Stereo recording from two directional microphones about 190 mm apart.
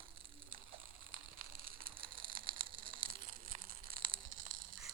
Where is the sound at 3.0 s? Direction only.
50° right (ahead or behind).